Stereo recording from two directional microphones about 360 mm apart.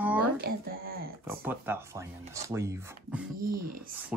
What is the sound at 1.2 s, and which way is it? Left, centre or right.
Speech, centre.